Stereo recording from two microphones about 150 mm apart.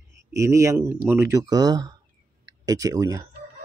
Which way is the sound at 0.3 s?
20° right (ahead or behind).